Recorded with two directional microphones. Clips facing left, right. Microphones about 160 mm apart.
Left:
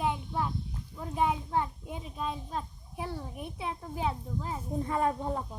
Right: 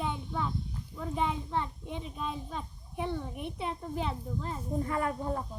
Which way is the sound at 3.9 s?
5° left (ahead or behind).